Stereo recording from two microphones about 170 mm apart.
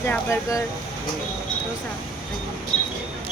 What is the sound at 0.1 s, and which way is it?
Speech, 15° left (ahead or behind).